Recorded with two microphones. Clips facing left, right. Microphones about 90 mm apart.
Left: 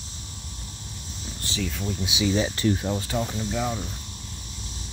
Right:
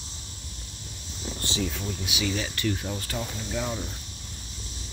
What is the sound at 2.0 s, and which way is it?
Speech, 20° left (ahead or behind).